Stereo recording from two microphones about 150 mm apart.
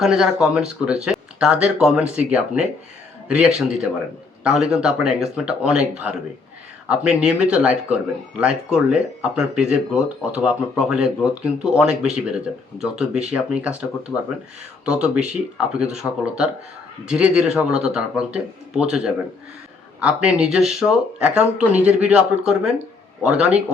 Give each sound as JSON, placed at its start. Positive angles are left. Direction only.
{"t": 0.0, "sound": "a man's voice", "side_deg": -5}
{"t": 14.1, "sound": "speech", "side_deg": 10}
{"t": 14.8, "sound": "speech", "side_deg": -5}